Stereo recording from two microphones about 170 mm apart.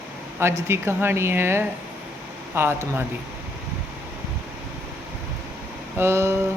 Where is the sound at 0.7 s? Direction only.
15° right (ahead or behind).